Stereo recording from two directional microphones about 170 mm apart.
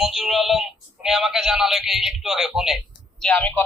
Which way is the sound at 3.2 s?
10° left (ahead or behind).